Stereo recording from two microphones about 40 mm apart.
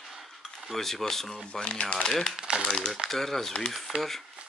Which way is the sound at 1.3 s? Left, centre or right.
Left.